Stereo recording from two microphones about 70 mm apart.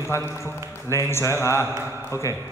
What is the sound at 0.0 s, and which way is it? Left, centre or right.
Speech, left.